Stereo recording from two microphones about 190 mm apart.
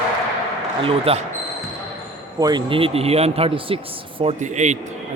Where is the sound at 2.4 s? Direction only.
25° right (ahead or behind).